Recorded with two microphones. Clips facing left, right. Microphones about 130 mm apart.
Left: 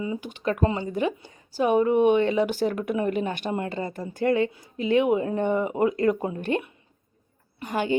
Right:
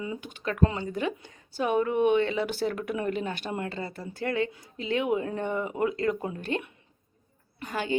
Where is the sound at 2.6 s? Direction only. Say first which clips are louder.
Left 4 dB; 30° left (ahead or behind).